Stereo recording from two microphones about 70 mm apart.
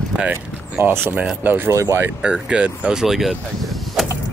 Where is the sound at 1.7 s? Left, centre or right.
Right.